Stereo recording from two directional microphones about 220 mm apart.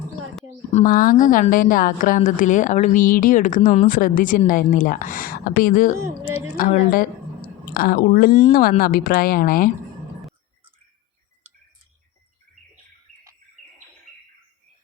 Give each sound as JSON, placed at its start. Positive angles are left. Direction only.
{"t": 0.7, "sound": "a woman's voice", "side_deg": 35}